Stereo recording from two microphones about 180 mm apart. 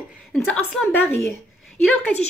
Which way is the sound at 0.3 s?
5° left (ahead or behind).